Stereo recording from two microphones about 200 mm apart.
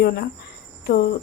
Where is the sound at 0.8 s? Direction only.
50° left (ahead or behind).